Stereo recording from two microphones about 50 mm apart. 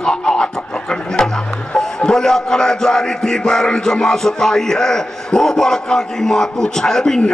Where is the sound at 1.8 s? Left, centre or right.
Centre.